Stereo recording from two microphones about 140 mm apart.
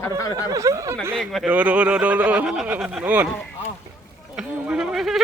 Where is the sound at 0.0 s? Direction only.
25° left (ahead or behind).